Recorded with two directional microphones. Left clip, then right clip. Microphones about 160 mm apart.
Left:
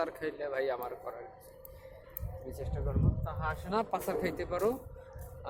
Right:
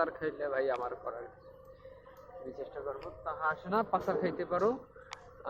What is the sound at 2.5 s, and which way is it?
Speech, 5° left (ahead or behind).